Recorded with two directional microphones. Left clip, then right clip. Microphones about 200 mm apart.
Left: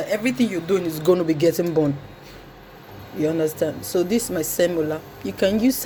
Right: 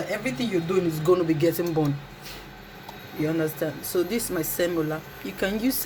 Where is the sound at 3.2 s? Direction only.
25° left (ahead or behind).